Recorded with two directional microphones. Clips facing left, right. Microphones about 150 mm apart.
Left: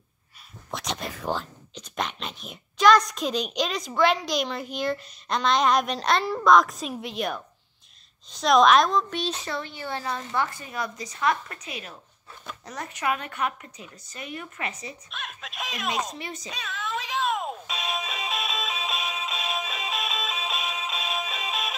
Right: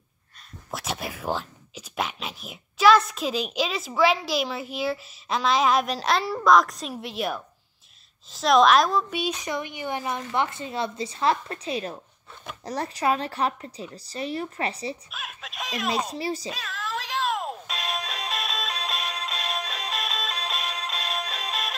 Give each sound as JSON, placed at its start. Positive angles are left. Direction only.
{"t": 0.7, "sound": "a woman's voice", "side_deg": -5}
{"t": 15.0, "sound": "a woman's voice", "side_deg": -5}
{"t": 16.1, "sound": "speech", "side_deg": -35}
{"t": 16.4, "sound": "music", "side_deg": 0}